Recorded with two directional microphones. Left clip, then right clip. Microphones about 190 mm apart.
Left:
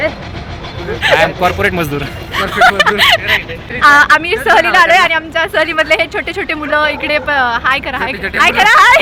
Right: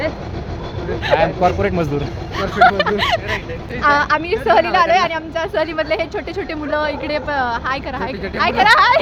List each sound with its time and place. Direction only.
1.1 s a man's voice: 5° right (ahead or behind)
2.3 s speech: 30° left (ahead or behind)
2.7 s speech: centre (ahead or behind); by 9.0 s 15° left (ahead or behind)